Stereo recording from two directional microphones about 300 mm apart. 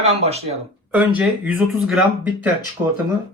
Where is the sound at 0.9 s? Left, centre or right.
Centre.